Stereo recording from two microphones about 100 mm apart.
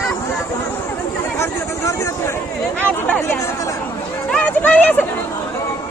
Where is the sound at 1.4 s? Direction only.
30° left (ahead or behind).